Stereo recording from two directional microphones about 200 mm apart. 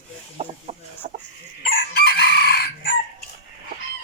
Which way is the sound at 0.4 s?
30° right (ahead or behind).